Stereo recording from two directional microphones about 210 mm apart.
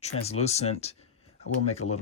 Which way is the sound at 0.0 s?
30° left (ahead or behind).